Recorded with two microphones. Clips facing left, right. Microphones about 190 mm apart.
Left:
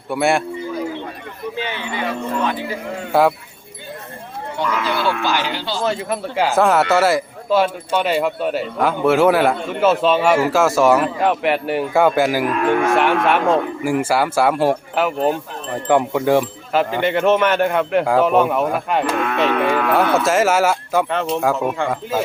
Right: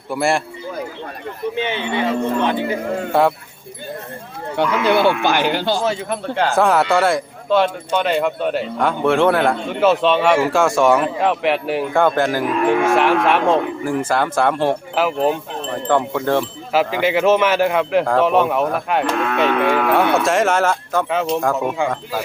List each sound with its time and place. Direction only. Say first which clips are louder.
0.1 s speech: left 1 dB; centre (ahead or behind)
1.5 s speech: right 4 dB; 20° right (ahead or behind)
3.1 s speech: left 1 dB; centre (ahead or behind)
4.5 s speech: right 6 dB; 60° right (ahead or behind)
5.8 s speech: even; centre (ahead or behind)
15.9 s wind chime: left 3 dB; 10° left (ahead or behind)
16.7 s speech: right 1 dB; 5° right (ahead or behind)
21.1 s speech: even; 5° right (ahead or behind)